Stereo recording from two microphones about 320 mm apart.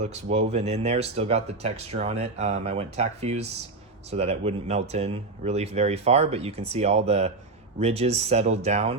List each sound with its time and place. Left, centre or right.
0.0 s speech: right